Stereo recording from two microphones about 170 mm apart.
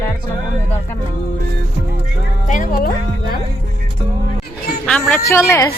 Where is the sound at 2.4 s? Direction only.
50° left (ahead or behind).